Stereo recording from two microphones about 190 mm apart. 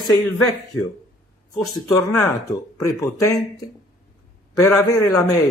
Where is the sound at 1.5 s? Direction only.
10° left (ahead or behind).